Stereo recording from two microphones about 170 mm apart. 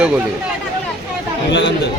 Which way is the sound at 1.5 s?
90° left.